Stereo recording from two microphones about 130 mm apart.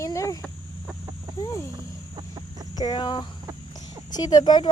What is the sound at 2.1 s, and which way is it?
Chicken, 35° right (ahead or behind).